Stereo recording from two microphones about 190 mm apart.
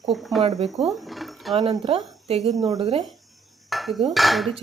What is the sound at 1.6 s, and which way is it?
Speech, 25° right (ahead or behind).